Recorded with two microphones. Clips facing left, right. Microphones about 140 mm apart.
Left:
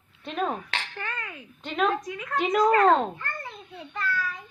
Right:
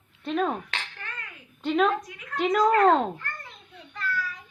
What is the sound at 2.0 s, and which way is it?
Speech, 85° left.